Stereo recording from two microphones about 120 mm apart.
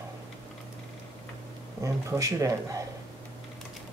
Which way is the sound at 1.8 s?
25° right (ahead or behind).